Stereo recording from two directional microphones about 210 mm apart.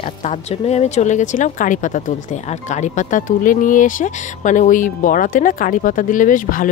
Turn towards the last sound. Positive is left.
turn(degrees=40)  # may be behind; listen again after turning